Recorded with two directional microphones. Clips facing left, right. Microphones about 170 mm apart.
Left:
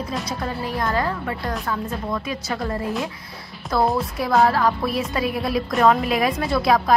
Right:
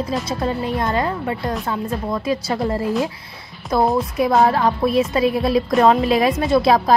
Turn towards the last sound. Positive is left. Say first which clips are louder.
# right 4 dB
turn(degrees=-25)  # may be behind; listen again after turning